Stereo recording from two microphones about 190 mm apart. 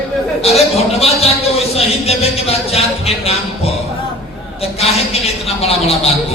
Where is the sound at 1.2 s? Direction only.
30° left (ahead or behind).